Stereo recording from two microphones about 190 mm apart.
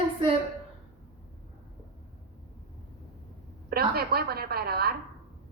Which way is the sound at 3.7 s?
55° right (ahead or behind).